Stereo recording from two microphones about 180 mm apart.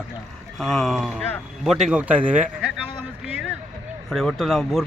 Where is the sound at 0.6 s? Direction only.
Centre (ahead or behind).